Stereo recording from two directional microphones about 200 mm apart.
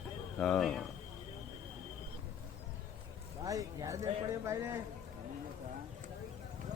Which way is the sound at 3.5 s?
15° right (ahead or behind).